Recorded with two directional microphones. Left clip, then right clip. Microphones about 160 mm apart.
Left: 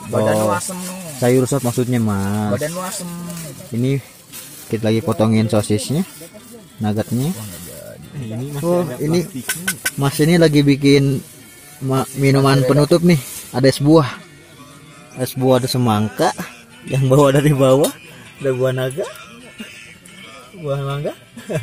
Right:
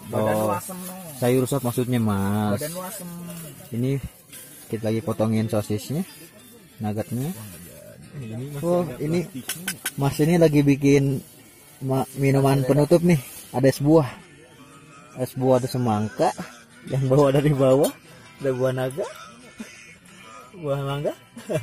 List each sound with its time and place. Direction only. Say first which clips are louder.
0.1 s speech: left 6 dB; 5° right (ahead or behind)
2.6 s speech: left 8 dB; 15° left (ahead or behind)
3.7 s speech: left 6 dB; 5° right (ahead or behind)
8.5 s speech: left 5 dB; 5° right (ahead or behind)
15.1 s speech: left 5 dB; 5° right (ahead or behind)
20.6 s speech: left 3 dB; 35° right (ahead or behind)